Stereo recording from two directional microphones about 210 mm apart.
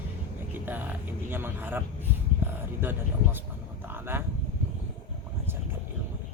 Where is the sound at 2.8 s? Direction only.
10° right (ahead or behind).